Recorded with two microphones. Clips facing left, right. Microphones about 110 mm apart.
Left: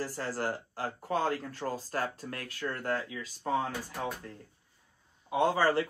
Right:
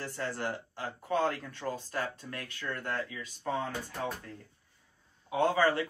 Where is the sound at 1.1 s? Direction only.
Centre (ahead or behind).